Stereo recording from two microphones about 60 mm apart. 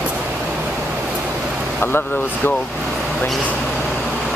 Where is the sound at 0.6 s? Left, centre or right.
Right.